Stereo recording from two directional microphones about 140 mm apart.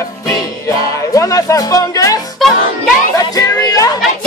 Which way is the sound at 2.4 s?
Centre (ahead or behind).